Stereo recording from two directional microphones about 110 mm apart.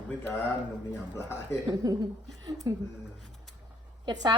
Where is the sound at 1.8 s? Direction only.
35° right (ahead or behind).